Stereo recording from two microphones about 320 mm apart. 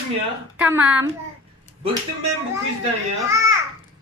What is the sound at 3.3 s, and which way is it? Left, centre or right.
Speech, centre.